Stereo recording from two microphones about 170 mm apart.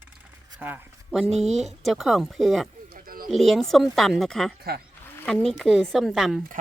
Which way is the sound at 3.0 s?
60° right (ahead or behind).